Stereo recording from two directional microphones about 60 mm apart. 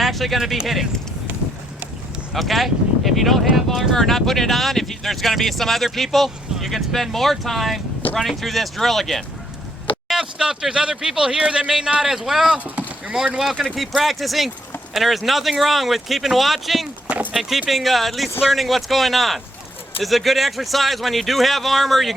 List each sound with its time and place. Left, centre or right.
0.0 s speech: centre
2.3 s speech: centre
10.1 s speech: centre
12.5 s speech: right
13.4 s speech: centre